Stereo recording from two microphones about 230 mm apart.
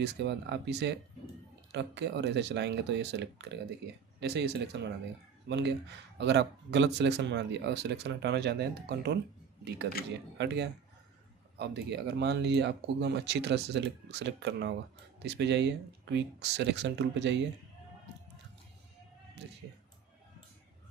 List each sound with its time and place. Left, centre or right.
0.0 s speech: right
10.3 s speech: right
19.4 s music: right